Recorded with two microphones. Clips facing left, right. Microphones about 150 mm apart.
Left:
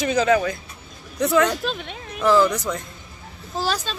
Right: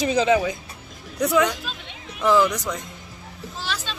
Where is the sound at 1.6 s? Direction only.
55° left (ahead or behind).